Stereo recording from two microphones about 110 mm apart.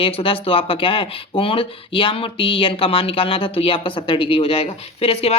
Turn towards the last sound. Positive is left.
turn(degrees=65)  # may be behind; listen again after turning